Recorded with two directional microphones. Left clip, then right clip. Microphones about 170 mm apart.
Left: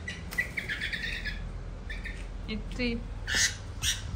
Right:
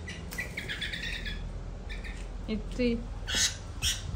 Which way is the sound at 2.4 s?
15° right (ahead or behind).